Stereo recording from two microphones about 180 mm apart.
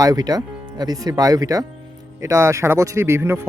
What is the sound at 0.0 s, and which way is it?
Speech, 20° right (ahead or behind).